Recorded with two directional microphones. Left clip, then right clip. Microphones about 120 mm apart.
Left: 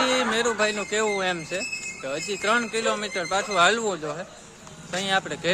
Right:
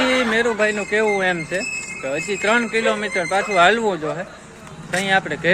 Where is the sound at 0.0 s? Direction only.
25° left (ahead or behind).